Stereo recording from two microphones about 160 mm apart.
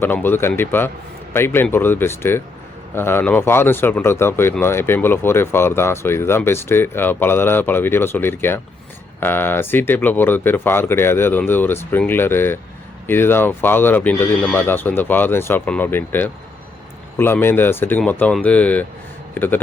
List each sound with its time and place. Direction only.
0.0 s speech: 10° left (ahead or behind)